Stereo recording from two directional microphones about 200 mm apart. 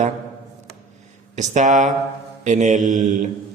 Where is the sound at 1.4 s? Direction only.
35° right (ahead or behind).